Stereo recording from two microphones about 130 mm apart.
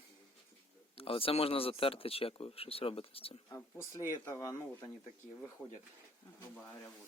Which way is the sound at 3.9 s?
25° left (ahead or behind).